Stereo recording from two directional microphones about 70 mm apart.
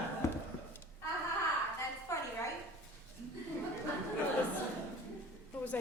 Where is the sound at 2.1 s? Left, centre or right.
Left.